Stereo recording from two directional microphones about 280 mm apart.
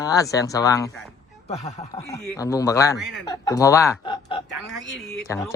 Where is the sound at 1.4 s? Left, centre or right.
Left.